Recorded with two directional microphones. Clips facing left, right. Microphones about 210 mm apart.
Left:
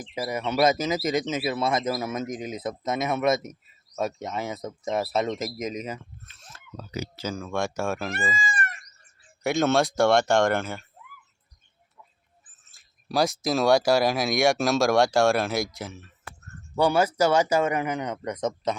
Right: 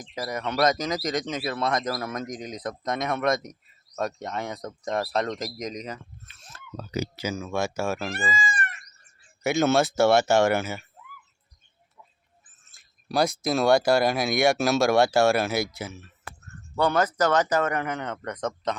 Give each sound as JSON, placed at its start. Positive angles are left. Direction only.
{"t": 0.1, "sound": "speech", "side_deg": 10}
{"t": 6.7, "sound": "speech", "side_deg": -40}
{"t": 7.2, "sound": "speech", "side_deg": -5}
{"t": 8.4, "sound": "a sound", "side_deg": 40}
{"t": 9.4, "sound": "speech", "side_deg": 0}
{"t": 12.7, "sound": "speech", "side_deg": 0}
{"t": 16.7, "sound": "speech", "side_deg": 10}